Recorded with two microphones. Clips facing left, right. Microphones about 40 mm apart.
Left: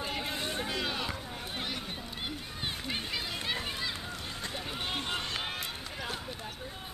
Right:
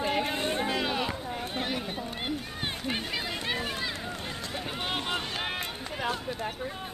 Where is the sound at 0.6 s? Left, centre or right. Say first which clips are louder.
Right 5 dB; centre.